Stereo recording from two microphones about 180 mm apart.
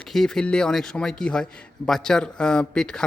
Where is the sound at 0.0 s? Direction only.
Centre (ahead or behind).